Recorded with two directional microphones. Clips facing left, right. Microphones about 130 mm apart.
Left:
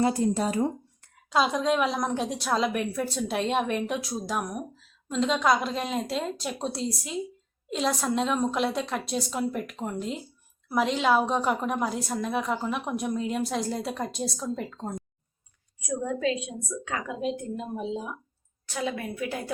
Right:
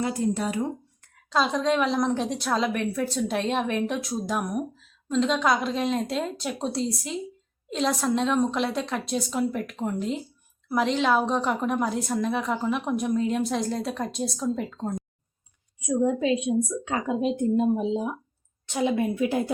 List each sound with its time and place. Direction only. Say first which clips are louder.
0.0 s speech: left 2 dB; 35° left (ahead or behind)
1.3 s a woman's voice: right 1 dB; 5° left (ahead or behind)
15.9 s a woman's voice: right 5 dB; 20° right (ahead or behind)